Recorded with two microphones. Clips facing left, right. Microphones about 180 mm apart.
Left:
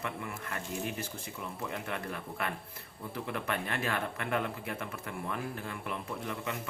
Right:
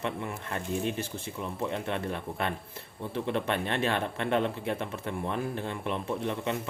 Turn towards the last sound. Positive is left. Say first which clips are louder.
# right 7 dB
turn(degrees=-25)  # may be behind; listen again after turning